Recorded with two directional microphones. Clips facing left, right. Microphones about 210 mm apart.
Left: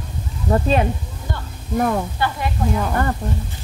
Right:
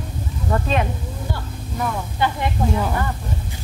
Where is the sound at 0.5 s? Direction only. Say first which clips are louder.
Left 4 dB; 35° left (ahead or behind).